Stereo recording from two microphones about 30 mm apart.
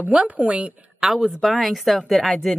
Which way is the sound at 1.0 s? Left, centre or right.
Centre.